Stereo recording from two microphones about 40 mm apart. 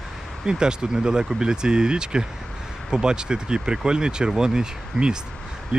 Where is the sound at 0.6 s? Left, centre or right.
Centre.